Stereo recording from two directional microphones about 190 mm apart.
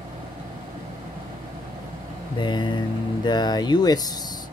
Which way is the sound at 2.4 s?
25° left (ahead or behind).